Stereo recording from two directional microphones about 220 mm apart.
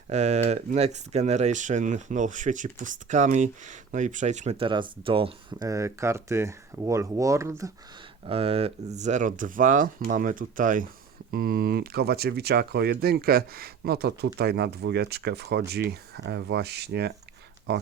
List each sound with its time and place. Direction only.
0.1 s speech: 30° right (ahead or behind); by 7.7 s 15° right (ahead or behind)
8.3 s speech: 25° right (ahead or behind); by 17.8 s 45° right (ahead or behind)